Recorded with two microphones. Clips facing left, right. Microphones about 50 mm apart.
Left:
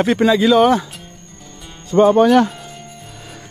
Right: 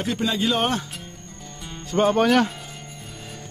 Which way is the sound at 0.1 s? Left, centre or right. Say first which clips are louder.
Left 9 dB; left.